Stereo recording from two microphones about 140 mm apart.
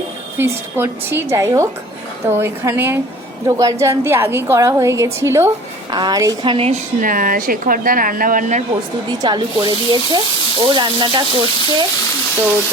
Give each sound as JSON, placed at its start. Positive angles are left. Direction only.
{"t": 0.3, "sound": "a woman's voice", "side_deg": -15}
{"t": 7.0, "sound": "speech", "side_deg": -80}
{"t": 9.0, "sound": "speech", "side_deg": -30}